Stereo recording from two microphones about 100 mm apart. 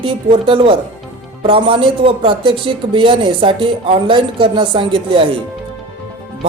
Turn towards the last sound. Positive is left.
turn(degrees=-70)  # may be behind; listen again after turning